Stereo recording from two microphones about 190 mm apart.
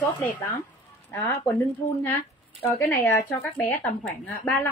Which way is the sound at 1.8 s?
35° left (ahead or behind).